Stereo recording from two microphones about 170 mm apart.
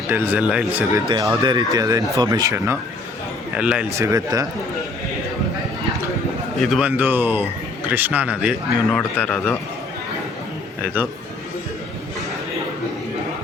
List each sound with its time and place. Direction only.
0.1 s speech: 10° right (ahead or behind)
1.0 s speech: 20° right (ahead or behind)
3.5 s speech: 5° right (ahead or behind)
3.9 s speech: 20° right (ahead or behind)
6.6 s speech: 5° right (ahead or behind)
8.9 s a man's voice: 5° left (ahead or behind)